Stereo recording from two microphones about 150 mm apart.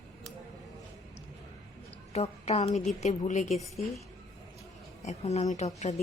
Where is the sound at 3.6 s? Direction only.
Centre (ahead or behind).